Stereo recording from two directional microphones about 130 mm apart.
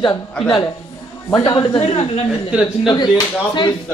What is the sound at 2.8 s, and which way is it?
Speech, 35° left (ahead or behind).